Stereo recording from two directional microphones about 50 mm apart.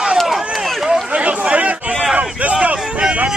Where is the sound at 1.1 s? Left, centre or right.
Right.